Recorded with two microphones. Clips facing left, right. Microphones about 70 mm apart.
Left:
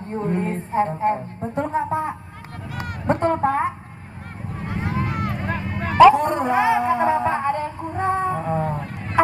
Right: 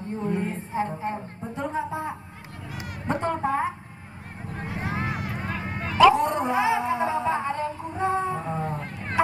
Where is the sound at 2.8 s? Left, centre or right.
Left.